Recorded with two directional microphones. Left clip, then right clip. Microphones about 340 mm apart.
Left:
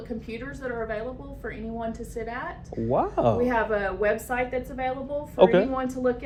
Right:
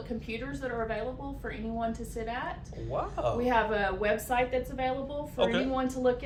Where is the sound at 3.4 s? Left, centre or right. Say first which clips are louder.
Left 3 dB; centre.